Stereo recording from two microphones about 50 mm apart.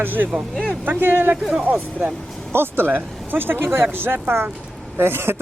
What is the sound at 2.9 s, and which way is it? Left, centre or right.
Speech, right.